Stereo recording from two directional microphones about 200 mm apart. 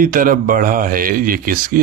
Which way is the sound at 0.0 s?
45° right (ahead or behind).